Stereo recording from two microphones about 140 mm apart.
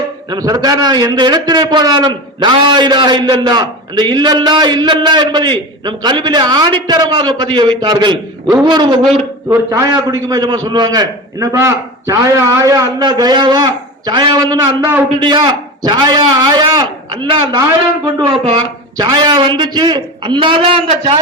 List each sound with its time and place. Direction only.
0.3 s a man's voice: 30° right (ahead or behind)
9.5 s a man's voice: 20° right (ahead or behind)